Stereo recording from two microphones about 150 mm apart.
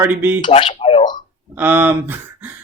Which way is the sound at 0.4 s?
35° left (ahead or behind).